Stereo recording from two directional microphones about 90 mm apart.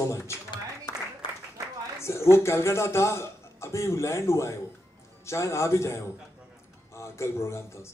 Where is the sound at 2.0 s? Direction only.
30° left (ahead or behind).